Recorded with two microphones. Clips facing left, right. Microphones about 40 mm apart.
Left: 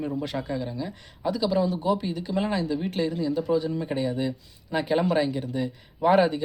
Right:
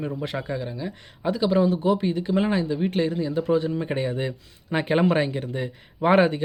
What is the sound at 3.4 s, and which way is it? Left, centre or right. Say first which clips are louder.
Speech: right 4 dB; right.